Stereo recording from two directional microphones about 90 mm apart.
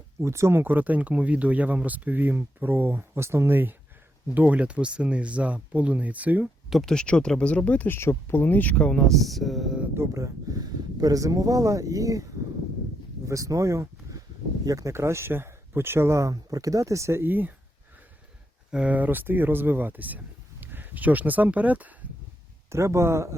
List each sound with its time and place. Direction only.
0.2 s speech: 30° right (ahead or behind)
6.7 s speech: centre (ahead or behind)
9.9 s speech: 30° right (ahead or behind)
18.7 s speech: 15° right (ahead or behind)
22.7 s speech: 30° right (ahead or behind)